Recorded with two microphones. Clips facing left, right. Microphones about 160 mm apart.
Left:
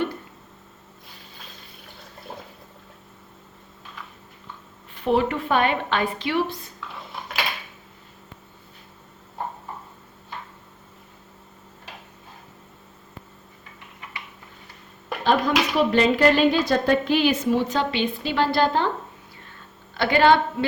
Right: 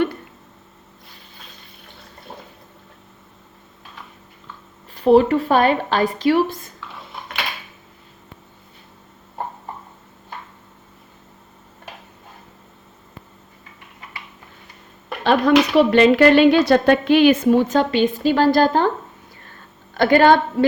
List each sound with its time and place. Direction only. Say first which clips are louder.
2.3 s water: even; centre (ahead or behind)
4.9 s a woman's voice: right 8 dB; 35° right (ahead or behind)
6.7 s dishes: even; centre (ahead or behind)
15.2 s a sound: right 5 dB; 70° right (ahead or behind)
15.9 s a woman's voice: right 4 dB; 70° right (ahead or behind); by 18.9 s 45° right (ahead or behind)
19.9 s a woman's voice: right 4 dB; 45° right (ahead or behind)